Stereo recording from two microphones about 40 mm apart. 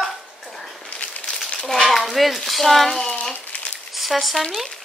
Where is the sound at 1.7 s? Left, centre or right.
Centre.